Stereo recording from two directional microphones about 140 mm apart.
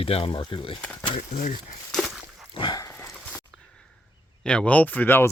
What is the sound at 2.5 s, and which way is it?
Dog, 35° left (ahead or behind).